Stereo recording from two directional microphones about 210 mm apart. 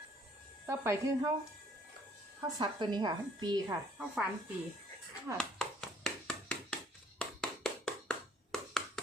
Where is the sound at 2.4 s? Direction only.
20° right (ahead or behind).